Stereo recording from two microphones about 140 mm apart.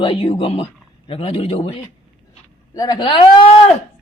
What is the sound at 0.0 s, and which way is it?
Speech, 40° left (ahead or behind).